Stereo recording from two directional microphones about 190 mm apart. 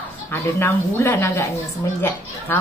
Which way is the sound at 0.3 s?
10° left (ahead or behind).